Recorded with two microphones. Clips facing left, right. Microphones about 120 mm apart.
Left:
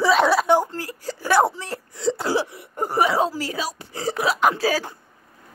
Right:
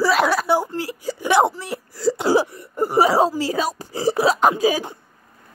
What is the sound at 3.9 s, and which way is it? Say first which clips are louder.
Speech: right 5 dB; 30° right (ahead or behind).